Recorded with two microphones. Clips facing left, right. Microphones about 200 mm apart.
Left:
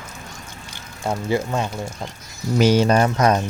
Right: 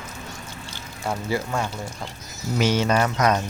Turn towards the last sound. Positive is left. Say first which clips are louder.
# left 4 dB
turn(degrees=30)  # may be behind; listen again after turning